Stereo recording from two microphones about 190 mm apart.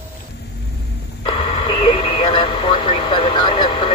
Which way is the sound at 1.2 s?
30° left (ahead or behind).